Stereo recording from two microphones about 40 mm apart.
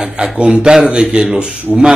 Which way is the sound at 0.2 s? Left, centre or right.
Right.